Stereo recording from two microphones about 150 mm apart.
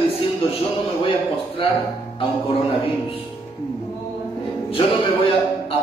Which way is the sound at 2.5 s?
40° left (ahead or behind).